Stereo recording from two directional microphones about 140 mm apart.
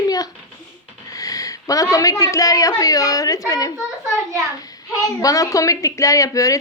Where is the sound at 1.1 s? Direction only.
25° left (ahead or behind).